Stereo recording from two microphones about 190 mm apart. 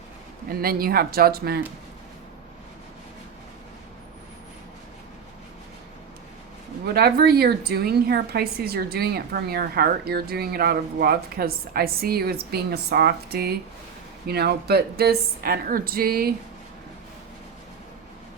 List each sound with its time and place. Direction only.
0.5 s a woman's voice: 50° right (ahead or behind)
6.8 s a woman's voice: 55° right (ahead or behind)